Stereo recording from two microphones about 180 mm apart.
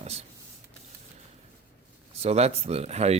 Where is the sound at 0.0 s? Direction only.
35° right (ahead or behind).